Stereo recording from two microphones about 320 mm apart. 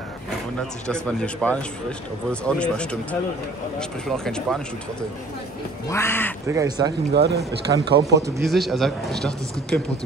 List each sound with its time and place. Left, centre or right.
0.6 s speech: centre
4.2 s speech: centre
5.9 s speech: centre
6.4 s speech: centre
7.2 s speech: right
7.9 s speech: centre